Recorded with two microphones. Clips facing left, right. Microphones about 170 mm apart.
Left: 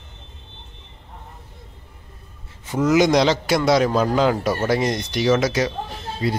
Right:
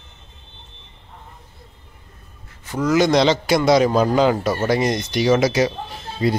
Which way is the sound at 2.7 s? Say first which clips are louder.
Even; 20° left (ahead or behind).